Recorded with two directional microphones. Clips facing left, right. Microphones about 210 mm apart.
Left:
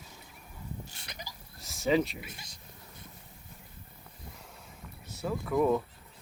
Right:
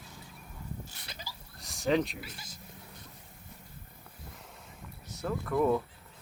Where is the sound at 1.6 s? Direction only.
Centre (ahead or behind).